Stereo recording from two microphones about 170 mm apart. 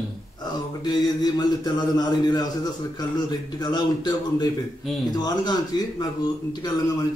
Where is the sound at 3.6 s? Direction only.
25° left (ahead or behind).